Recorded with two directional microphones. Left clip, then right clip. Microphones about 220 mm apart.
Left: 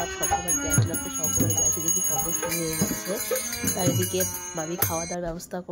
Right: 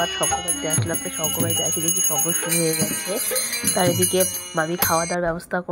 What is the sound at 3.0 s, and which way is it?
Speech, 15° right (ahead or behind).